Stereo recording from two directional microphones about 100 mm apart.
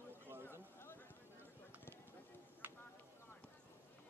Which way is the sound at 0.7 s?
20° left (ahead or behind).